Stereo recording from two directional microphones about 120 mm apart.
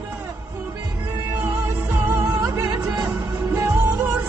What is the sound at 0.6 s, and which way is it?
Music, 15° right (ahead or behind).